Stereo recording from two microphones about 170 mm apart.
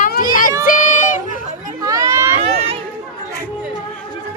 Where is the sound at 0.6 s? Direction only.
55° left (ahead or behind).